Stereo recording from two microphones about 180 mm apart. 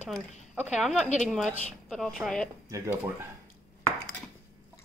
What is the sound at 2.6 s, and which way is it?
Speech, 15° right (ahead or behind).